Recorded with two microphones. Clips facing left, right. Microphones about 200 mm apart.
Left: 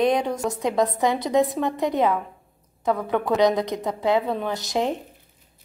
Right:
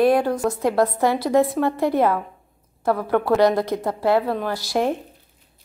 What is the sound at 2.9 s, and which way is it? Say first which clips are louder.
Speech: right 3 dB; 5° right (ahead or behind).